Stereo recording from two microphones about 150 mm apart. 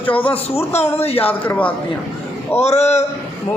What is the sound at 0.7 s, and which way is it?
Speech, 45° left (ahead or behind).